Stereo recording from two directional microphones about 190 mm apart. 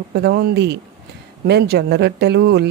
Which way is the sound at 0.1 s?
60° right (ahead or behind).